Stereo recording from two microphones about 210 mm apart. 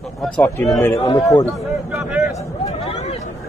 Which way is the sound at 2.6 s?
30° left (ahead or behind).